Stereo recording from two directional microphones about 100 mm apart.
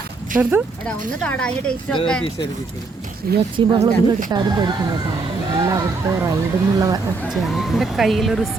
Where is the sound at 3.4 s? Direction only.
60° right (ahead or behind).